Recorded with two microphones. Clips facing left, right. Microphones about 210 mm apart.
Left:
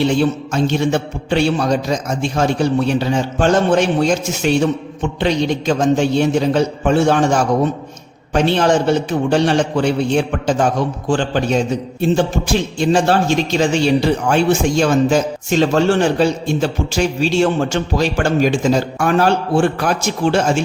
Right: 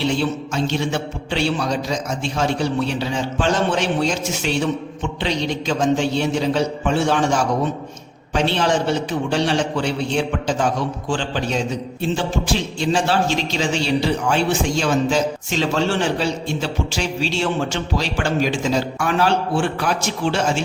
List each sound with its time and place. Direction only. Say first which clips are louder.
0.2 s a man's voice: left 5 dB; 50° left (ahead or behind)